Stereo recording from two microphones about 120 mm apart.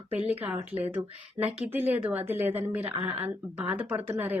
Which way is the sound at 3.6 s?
15° right (ahead or behind).